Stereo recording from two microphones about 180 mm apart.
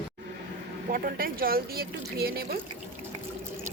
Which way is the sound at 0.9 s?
55° right (ahead or behind).